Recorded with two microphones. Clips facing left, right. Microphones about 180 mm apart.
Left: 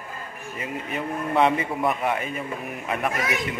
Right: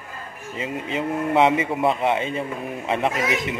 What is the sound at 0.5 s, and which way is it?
A man's voice, 20° right (ahead or behind).